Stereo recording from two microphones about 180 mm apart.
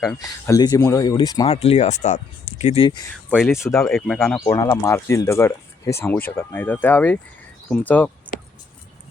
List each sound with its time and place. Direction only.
0.2 s speech: 20° left (ahead or behind)
1.5 s speech: 35° left (ahead or behind)
3.2 s speech: centre (ahead or behind)
4.4 s speech: 20° left (ahead or behind)